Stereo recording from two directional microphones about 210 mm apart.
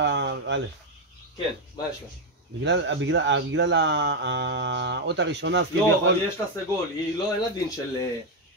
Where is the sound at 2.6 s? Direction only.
55° right (ahead or behind).